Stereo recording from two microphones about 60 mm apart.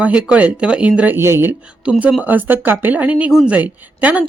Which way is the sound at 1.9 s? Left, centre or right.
Right.